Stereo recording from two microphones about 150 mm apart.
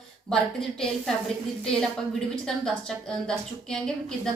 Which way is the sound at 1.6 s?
5° left (ahead or behind).